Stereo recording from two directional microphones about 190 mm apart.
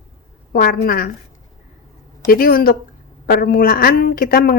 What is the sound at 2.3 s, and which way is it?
A woman's voice, 50° left (ahead or behind).